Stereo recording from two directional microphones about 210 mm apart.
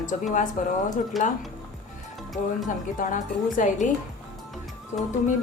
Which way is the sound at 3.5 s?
40° left (ahead or behind).